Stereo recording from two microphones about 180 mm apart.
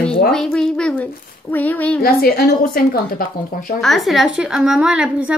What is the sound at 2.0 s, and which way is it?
Speech, 55° left (ahead or behind).